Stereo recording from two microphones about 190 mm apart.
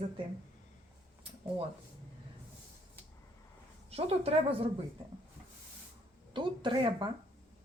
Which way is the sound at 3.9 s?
30° right (ahead or behind).